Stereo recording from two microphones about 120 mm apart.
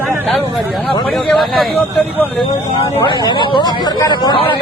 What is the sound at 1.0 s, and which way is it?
Speech, 5° left (ahead or behind).